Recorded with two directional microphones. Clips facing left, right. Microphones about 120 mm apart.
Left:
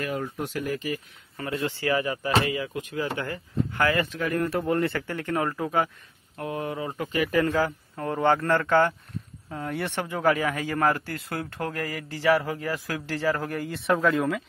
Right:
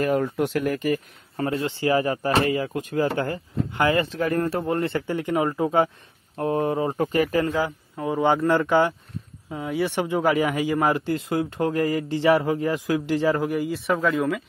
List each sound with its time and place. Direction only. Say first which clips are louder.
0.2 s speech: right 7 dB; 65° right (ahead or behind); by 1.4 s 50° right (ahead or behind)
1.4 s speech: right 4 dB; 30° right (ahead or behind)
2.4 s speech: right 5 dB; 45° right (ahead or behind)
3.7 s speech: right 4 dB; 25° right (ahead or behind); by 7.3 s 40° right (ahead or behind)
7.4 s speech: even; 15° right (ahead or behind)
13.7 s speech: left 3 dB; centre (ahead or behind)